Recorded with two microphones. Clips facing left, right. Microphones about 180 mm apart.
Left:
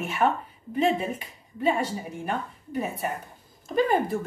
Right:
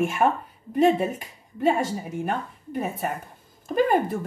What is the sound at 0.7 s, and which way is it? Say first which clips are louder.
A woman's voice: right 4 dB; 45° right (ahead or behind).